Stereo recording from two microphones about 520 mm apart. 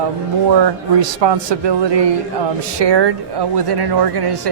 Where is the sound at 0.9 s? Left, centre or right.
Right.